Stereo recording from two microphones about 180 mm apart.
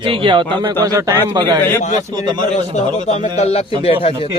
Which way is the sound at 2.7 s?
35° left (ahead or behind).